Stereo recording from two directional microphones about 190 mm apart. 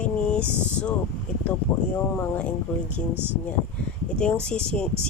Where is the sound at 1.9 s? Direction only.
5° left (ahead or behind).